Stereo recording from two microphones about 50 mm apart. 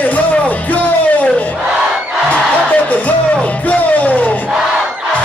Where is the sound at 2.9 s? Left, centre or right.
Left.